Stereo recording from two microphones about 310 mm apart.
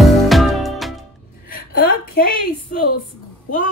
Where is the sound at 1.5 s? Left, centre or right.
Left.